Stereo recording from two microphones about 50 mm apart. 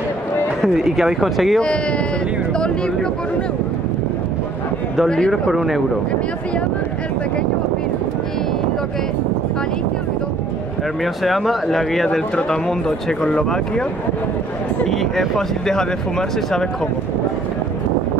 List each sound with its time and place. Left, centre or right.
0.6 s speech: centre
1.6 s speech: left
5.3 s speech: centre
11.2 s speech: centre
14.9 s speech: centre